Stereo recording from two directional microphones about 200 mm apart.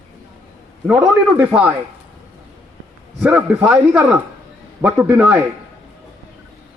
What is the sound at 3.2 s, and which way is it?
Speech, 5° right (ahead or behind).